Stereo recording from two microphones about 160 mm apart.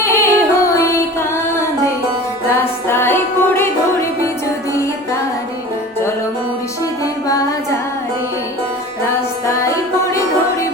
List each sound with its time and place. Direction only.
0.0 s music: 15° left (ahead or behind)
2.5 s music: 15° left (ahead or behind)
7.0 s music: 20° left (ahead or behind)
9.0 s music: 20° left (ahead or behind)